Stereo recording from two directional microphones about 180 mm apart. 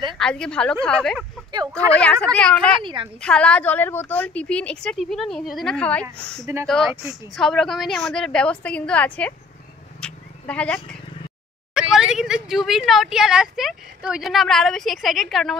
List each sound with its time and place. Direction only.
0.1 s a woman's voice: 5° left (ahead or behind)
2.8 s a woman's voice: 25° right (ahead or behind)
3.2 s a woman's voice: 5° left (ahead or behind)
6.4 s speech: 15° right (ahead or behind)
7.1 s speech: centre (ahead or behind)
9.9 s a sound: 5° left (ahead or behind)
11.9 s speech: 5° right (ahead or behind)